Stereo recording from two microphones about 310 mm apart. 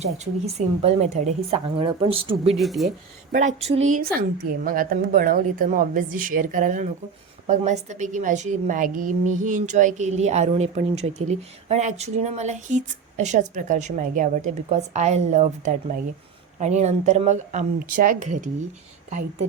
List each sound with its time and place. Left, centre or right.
0.0 s a woman's voice: centre
2.6 s speech: centre
3.3 s a woman's voice: right
3.8 s a woman's voice: right
4.1 s a woman's voice: right